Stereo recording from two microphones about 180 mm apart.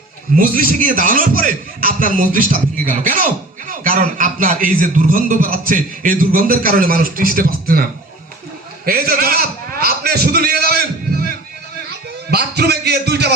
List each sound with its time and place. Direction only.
0.3 s a man's voice: 50° right (ahead or behind)
8.8 s a sound: 55° right (ahead or behind)
12.3 s a man's voice: 65° right (ahead or behind)